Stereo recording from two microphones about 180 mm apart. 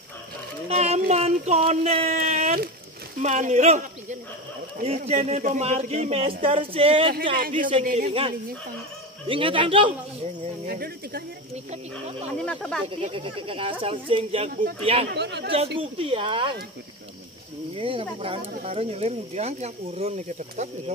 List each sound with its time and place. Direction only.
0.7 s a sound: 35° right (ahead or behind)
3.2 s speech: 40° right (ahead or behind)
7.3 s a man's voice: 50° right (ahead or behind)
8.1 s speech: 30° right (ahead or behind)
10.7 s speech: 60° right (ahead or behind)
12.4 s speech: 5° left (ahead or behind)
12.8 s speech: 30° right (ahead or behind)
15.0 s a man's voice: 70° right (ahead or behind)
15.5 s speech: 30° right (ahead or behind)
17.7 s speech: 30° right (ahead or behind)